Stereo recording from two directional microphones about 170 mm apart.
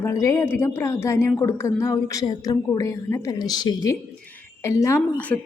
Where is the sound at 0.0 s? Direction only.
20° left (ahead or behind).